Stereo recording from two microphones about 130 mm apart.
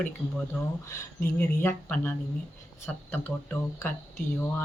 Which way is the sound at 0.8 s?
20° left (ahead or behind).